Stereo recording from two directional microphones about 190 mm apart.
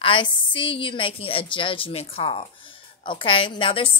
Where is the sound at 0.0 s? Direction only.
25° left (ahead or behind).